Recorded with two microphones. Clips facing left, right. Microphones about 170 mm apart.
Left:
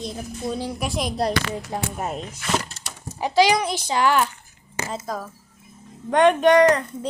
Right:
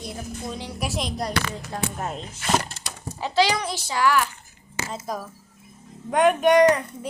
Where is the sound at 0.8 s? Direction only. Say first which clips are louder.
Left 2 dB; 5° right (ahead or behind).